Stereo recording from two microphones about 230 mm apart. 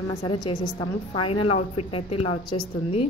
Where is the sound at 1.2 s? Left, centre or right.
Left.